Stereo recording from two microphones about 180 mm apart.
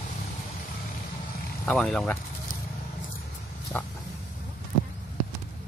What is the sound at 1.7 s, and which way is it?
Speech, 5° left (ahead or behind).